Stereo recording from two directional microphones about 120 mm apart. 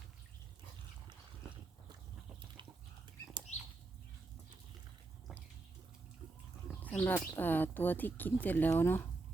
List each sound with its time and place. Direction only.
3.5 s bird flight: 70° left (ahead or behind)
7.0 s speech: 15° left (ahead or behind)